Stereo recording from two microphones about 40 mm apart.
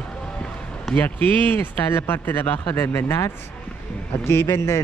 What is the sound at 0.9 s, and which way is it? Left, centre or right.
Speech, left.